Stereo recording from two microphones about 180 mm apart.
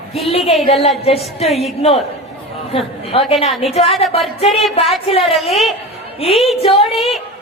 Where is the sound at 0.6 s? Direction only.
35° left (ahead or behind).